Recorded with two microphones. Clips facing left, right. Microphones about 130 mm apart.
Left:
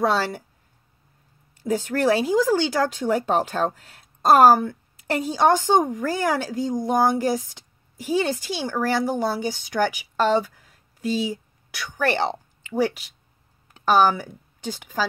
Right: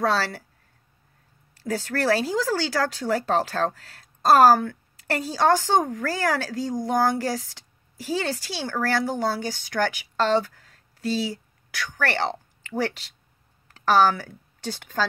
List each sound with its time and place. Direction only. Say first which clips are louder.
0.0 s speech: left 2 dB; 15° left (ahead or behind)
1.5 s a woman's voice: left 4 dB; 20° left (ahead or behind)